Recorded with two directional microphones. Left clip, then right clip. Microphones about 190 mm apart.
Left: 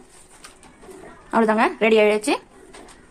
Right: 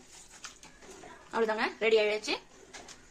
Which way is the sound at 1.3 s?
60° left (ahead or behind).